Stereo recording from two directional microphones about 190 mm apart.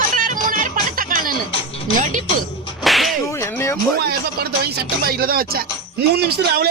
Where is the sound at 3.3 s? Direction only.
15° left (ahead or behind).